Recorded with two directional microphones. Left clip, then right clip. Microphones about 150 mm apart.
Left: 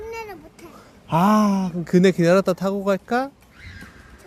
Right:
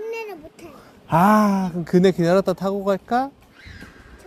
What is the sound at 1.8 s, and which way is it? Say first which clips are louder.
A man's voice: left 1 dB; 25° left (ahead or behind).